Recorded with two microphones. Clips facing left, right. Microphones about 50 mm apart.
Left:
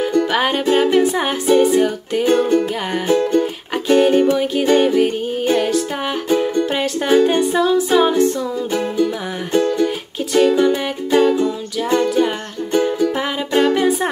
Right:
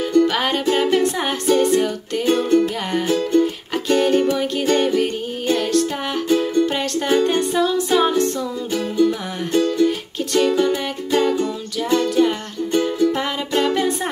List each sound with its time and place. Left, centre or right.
0.0 s music: centre
6.2 s music: left
6.6 s music: centre
9.6 s music: left
9.8 s music: centre